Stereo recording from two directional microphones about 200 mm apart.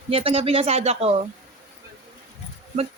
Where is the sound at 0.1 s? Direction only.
30° right (ahead or behind).